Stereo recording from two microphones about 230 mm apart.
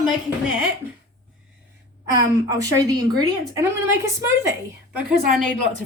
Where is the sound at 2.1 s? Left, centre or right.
Centre.